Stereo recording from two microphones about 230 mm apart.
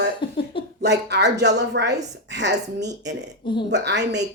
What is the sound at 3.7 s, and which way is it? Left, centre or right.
Speech, right.